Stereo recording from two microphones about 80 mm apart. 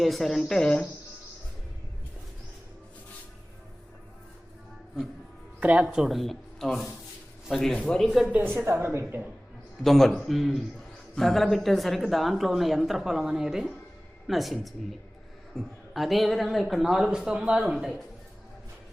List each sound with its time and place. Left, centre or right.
0.0 s speech: centre
5.5 s speech: centre
8.3 s a woman's voice: right
9.8 s speech: centre